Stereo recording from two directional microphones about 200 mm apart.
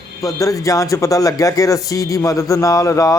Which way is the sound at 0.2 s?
15° left (ahead or behind).